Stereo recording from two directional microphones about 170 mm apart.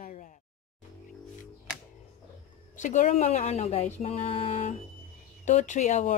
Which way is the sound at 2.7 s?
45° left (ahead or behind).